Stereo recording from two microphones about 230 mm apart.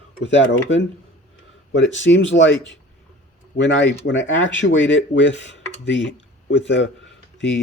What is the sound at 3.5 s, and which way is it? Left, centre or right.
Speech, left.